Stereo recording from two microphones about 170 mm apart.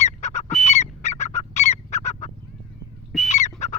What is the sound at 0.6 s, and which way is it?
Fowl, 40° left (ahead or behind).